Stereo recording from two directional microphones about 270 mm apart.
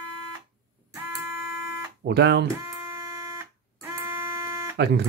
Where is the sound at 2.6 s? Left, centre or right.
Centre.